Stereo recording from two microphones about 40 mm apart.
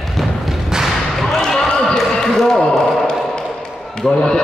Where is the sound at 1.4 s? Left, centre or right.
Centre.